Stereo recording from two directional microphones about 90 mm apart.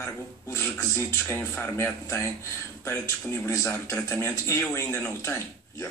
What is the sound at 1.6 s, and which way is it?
A man's voice, 25° left (ahead or behind).